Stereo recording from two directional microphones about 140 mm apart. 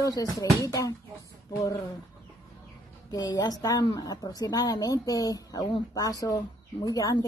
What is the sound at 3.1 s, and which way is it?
A woman's voice, 30° left (ahead or behind).